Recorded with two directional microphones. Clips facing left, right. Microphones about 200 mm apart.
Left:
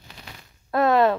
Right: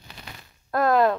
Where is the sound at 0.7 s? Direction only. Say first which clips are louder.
Left 1 dB; centre (ahead or behind).